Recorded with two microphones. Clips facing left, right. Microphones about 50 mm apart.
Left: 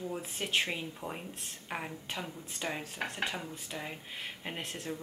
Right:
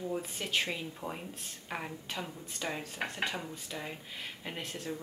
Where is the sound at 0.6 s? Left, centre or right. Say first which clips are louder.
Left 1 dB; centre.